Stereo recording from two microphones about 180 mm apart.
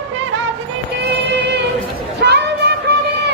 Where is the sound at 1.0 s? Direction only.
70° right (ahead or behind).